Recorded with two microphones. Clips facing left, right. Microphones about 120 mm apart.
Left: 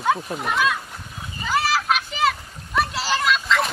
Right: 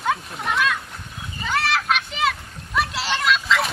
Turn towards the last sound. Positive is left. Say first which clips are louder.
# even
turn(degrees=0)  # may be behind; listen again after turning